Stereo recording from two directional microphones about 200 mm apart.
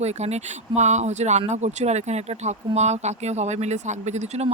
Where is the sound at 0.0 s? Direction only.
35° right (ahead or behind).